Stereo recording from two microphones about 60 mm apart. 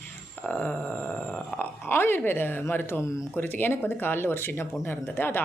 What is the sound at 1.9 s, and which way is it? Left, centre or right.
Speech, left.